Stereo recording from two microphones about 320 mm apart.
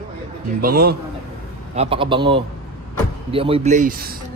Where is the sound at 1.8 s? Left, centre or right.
Centre.